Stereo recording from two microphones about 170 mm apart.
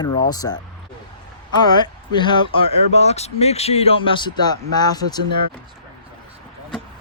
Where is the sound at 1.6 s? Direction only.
25° left (ahead or behind).